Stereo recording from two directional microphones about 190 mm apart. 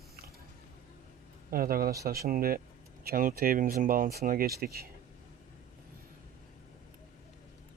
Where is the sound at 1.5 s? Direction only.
50° right (ahead or behind).